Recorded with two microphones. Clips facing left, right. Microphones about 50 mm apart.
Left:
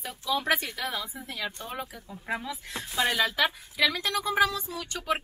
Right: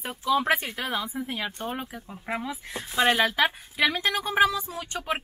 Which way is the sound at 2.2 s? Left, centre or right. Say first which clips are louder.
Right 1 dB; right.